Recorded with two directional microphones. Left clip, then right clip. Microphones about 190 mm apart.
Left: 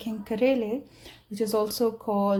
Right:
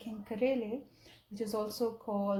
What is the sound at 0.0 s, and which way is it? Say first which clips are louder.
Speech: left 8 dB; 30° left (ahead or behind).